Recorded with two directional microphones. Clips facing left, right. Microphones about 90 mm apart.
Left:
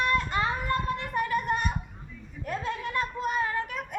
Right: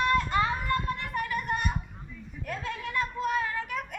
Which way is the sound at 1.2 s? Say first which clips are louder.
Left 4 dB; 25° left (ahead or behind).